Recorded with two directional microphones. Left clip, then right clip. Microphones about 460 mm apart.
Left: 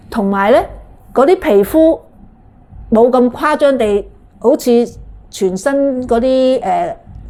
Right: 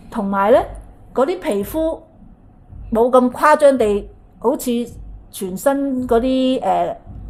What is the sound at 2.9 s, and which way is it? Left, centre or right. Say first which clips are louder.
A woman's voice: left 4 dB; centre.